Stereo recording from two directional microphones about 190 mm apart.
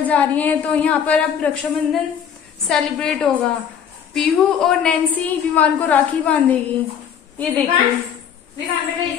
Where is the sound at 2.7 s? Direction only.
5° left (ahead or behind).